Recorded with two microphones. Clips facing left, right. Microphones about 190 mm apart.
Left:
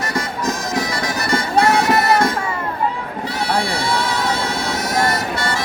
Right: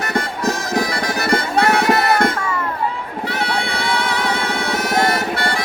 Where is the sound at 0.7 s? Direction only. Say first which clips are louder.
Right 2 dB; 60° right (ahead or behind).